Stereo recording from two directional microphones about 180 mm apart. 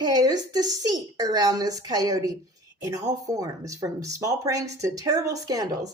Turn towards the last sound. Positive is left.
turn(degrees=-20)  # may be behind; listen again after turning